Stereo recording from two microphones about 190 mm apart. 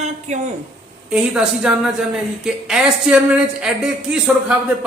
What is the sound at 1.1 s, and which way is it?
A woman's voice, 5° right (ahead or behind).